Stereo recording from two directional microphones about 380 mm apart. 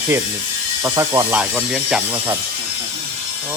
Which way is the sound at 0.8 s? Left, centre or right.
Centre.